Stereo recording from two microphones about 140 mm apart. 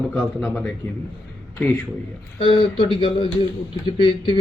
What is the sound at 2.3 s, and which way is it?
Speech, 40° left (ahead or behind).